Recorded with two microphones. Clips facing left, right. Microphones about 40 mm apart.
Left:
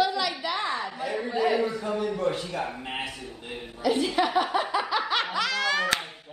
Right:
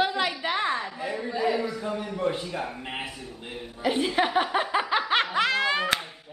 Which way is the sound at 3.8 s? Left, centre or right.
Right.